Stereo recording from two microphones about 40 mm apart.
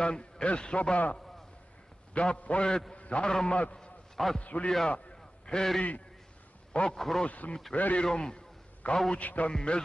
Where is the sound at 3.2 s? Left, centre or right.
Centre.